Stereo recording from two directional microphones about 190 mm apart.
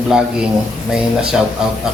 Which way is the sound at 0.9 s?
5° right (ahead or behind).